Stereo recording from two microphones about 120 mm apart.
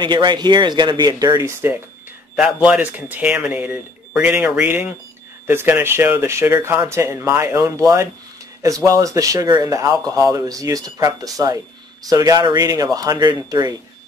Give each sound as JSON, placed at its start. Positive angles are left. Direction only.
{"t": 0.0, "sound": "speech", "side_deg": -40}
{"t": 2.3, "sound": "speech", "side_deg": -5}